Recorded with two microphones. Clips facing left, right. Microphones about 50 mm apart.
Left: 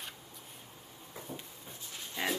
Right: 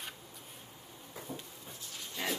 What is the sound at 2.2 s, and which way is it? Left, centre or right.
Pig, left.